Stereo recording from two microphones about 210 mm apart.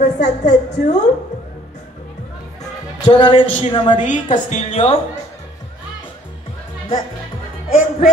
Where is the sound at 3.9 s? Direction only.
35° left (ahead or behind).